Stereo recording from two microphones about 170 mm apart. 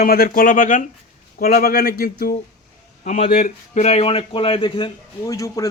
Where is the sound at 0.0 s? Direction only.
60° left (ahead or behind).